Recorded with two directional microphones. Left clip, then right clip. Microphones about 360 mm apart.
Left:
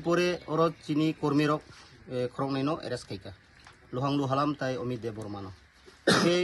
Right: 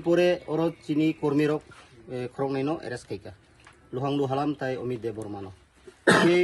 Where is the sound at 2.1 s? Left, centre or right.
Centre.